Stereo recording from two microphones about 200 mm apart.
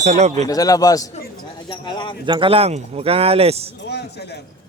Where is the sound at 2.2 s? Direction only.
25° right (ahead or behind).